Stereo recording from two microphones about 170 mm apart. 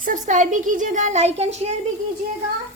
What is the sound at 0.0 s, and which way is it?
Speech, 50° right (ahead or behind).